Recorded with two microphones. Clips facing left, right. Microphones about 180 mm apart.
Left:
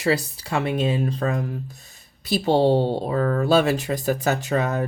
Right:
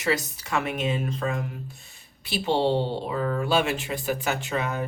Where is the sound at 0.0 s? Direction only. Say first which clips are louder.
Left 4 dB; 30° left (ahead or behind).